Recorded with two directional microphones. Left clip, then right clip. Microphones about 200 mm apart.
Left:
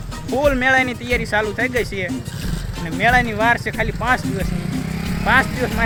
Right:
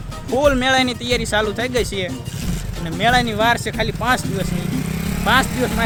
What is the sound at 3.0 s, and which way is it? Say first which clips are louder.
Speech: even; 15° right (ahead or behind).